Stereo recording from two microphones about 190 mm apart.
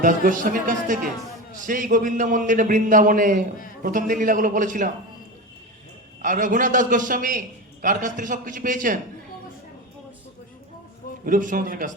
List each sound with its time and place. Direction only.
0.0 s a man's voice: 45° right (ahead or behind)
6.2 s a man's voice: 45° right (ahead or behind)
11.3 s a man's voice: 45° right (ahead or behind)